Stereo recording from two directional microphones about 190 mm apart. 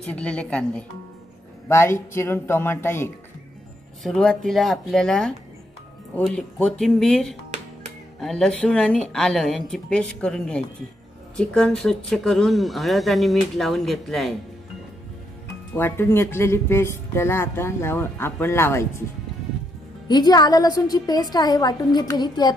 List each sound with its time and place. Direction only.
0.0 s speech: 5° left (ahead or behind)
4.0 s speech: centre (ahead or behind)
15.7 s speech: 10° left (ahead or behind)
20.1 s a woman's voice: 20° left (ahead or behind)